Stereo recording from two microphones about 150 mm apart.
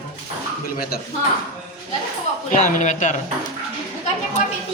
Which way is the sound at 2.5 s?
55° left (ahead or behind).